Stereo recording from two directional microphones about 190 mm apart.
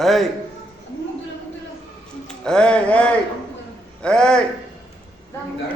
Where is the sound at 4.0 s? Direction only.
5° left (ahead or behind).